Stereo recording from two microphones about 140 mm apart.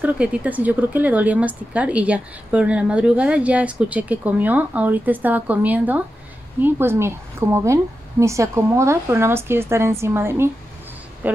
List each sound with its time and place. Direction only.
0.0 s a woman's voice: 10° right (ahead or behind)